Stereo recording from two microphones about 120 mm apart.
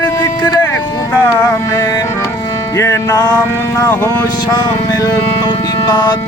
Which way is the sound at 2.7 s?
25° left (ahead or behind).